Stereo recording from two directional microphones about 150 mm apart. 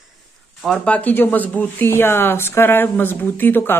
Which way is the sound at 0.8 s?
10° left (ahead or behind).